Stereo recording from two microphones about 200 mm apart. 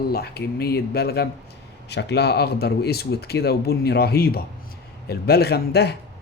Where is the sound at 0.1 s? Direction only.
50° left (ahead or behind).